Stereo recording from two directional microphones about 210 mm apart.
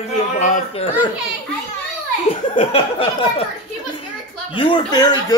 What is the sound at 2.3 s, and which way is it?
Speech, 25° left (ahead or behind).